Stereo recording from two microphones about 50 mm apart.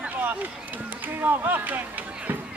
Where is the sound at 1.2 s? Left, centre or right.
Right.